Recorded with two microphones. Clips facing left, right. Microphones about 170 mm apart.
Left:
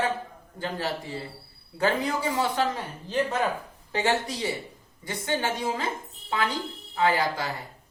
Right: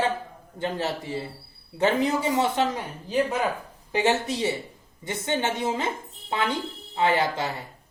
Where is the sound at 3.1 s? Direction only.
10° right (ahead or behind).